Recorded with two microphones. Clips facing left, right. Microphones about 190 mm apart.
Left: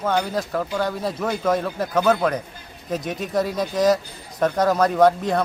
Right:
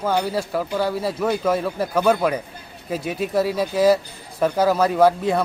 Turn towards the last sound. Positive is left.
turn(degrees=-5)  # may be behind; listen again after turning